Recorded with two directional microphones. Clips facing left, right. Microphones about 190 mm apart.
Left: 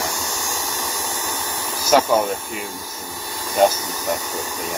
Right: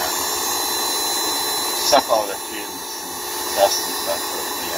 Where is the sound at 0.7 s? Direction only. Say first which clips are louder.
Right 2 dB; 10° right (ahead or behind).